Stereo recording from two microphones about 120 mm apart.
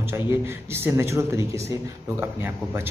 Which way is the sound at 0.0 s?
20° right (ahead or behind).